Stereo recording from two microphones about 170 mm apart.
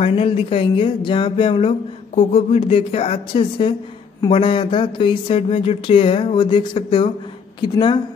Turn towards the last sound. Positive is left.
turn(degrees=25)  # may be behind; listen again after turning